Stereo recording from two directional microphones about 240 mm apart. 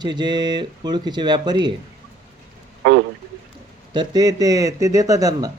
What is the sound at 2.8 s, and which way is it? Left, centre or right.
Speech, right.